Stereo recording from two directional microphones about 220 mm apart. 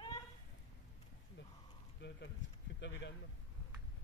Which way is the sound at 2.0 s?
50° left (ahead or behind).